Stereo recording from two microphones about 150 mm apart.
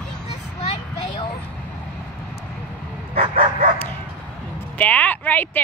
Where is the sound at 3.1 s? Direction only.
50° right (ahead or behind).